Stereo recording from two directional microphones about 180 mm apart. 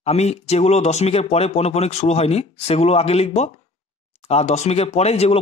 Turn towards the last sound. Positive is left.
turn(degrees=35)  # may be behind; listen again after turning